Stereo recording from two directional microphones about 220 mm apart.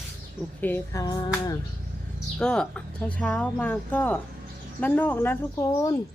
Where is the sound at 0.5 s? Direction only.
10° left (ahead or behind).